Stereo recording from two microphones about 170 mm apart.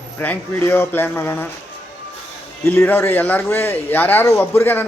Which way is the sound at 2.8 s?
15° left (ahead or behind).